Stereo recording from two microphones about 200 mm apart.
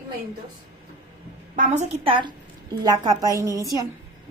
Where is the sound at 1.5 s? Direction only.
30° right (ahead or behind).